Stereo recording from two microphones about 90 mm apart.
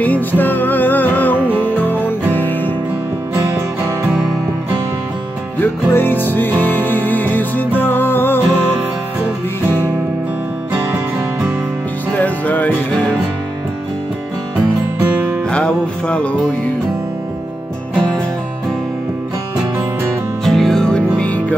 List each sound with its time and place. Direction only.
0.0 s music: 20° left (ahead or behind)
5.6 s music: 20° left (ahead or behind)
12.1 s music: 20° left (ahead or behind)
14.6 s music: 20° right (ahead or behind)
15.5 s music: 10° left (ahead or behind)
20.4 s music: 5° left (ahead or behind)